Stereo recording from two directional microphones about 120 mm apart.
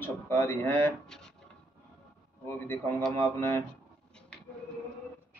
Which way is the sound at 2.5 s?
20° left (ahead or behind).